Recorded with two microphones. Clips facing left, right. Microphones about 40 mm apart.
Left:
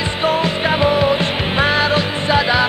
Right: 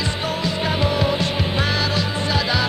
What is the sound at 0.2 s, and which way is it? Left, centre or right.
Music, left.